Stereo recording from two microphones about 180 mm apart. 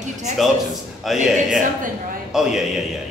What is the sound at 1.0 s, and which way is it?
Speech, centre (ahead or behind).